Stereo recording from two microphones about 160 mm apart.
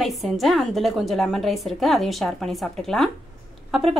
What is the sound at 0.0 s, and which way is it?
A woman's voice, centre (ahead or behind).